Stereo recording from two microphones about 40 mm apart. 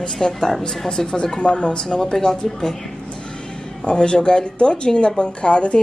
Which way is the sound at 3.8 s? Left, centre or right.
Left.